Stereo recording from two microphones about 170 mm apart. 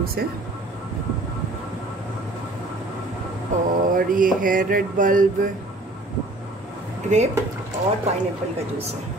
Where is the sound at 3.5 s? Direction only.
45° right (ahead or behind).